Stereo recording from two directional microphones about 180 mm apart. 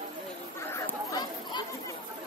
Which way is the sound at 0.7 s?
15° left (ahead or behind).